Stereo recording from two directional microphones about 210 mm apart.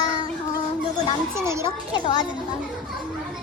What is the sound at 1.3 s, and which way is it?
Speech, 15° right (ahead or behind).